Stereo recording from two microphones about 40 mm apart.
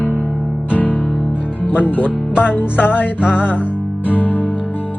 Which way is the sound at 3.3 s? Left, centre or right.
Left.